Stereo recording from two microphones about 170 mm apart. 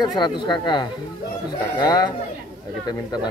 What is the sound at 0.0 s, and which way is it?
Speech, 25° left (ahead or behind).